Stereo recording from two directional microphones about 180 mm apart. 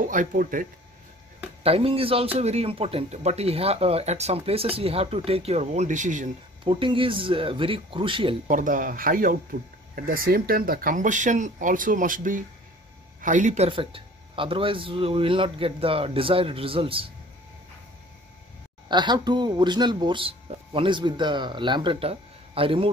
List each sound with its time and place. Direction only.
0.0 s speech: 45° right (ahead or behind)
1.6 s speech: 30° right (ahead or behind)
6.6 s speech: 30° right (ahead or behind)
8.5 s speech: 45° right (ahead or behind)
13.7 s speech: 30° right (ahead or behind)
18.9 s speech: 25° right (ahead or behind)